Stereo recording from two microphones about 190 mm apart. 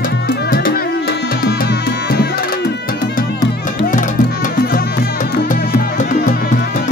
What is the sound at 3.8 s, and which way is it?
Music, 45° left (ahead or behind).